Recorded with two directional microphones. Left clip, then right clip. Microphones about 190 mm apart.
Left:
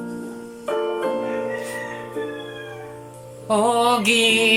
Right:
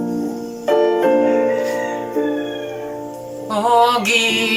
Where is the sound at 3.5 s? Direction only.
15° left (ahead or behind).